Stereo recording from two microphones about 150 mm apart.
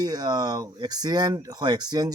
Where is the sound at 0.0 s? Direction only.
25° right (ahead or behind).